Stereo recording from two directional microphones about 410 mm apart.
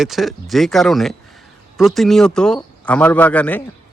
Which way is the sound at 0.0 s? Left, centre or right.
Centre.